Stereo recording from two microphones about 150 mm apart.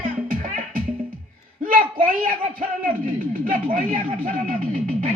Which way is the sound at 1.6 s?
65° right (ahead or behind).